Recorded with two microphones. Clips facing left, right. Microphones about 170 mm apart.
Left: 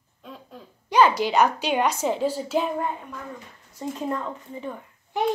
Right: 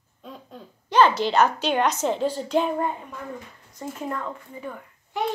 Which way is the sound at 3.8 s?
15° left (ahead or behind).